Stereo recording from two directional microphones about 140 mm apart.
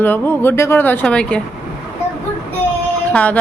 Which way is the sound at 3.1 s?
10° left (ahead or behind).